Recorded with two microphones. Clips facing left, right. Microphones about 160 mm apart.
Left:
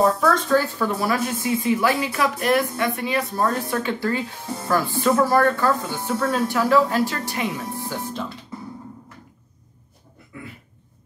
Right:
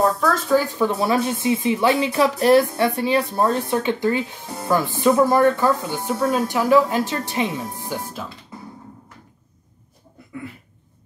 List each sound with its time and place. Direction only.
0.5 s a woman's voice: 15° right (ahead or behind)